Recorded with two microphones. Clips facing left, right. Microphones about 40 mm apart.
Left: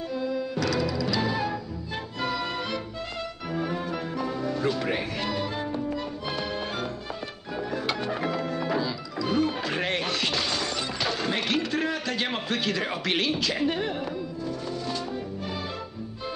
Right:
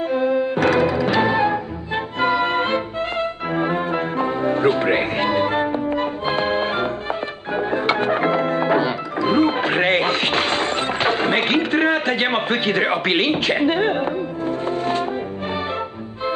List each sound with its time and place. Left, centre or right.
0.1 s music: right